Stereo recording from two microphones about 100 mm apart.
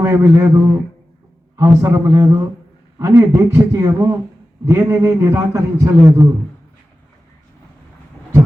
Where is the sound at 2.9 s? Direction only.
30° right (ahead or behind).